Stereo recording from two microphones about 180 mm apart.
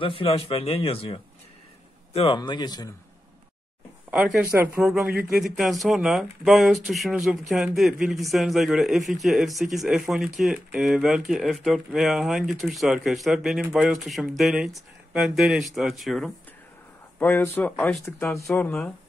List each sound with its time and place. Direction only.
0.0 s speech: 30° left (ahead or behind)
4.1 s speech: 5° right (ahead or behind)
17.2 s speech: 10° left (ahead or behind)